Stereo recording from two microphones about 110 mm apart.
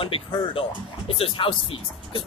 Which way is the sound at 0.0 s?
55° left (ahead or behind).